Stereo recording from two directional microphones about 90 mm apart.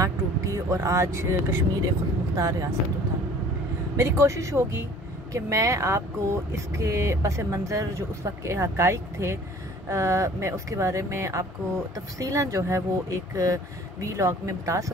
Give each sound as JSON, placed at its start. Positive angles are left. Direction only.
{"t": 0.0, "sound": "speech", "side_deg": -35}
{"t": 3.9, "sound": "speech", "side_deg": -35}